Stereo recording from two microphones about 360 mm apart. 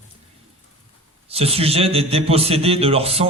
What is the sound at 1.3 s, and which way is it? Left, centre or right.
A man's voice, centre.